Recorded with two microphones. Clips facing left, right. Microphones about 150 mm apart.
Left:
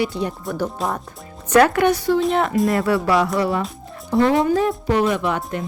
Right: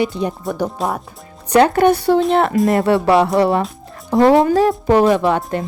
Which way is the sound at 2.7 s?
25° right (ahead or behind).